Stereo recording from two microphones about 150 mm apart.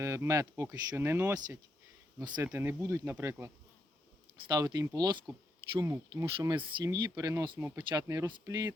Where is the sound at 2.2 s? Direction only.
30° right (ahead or behind).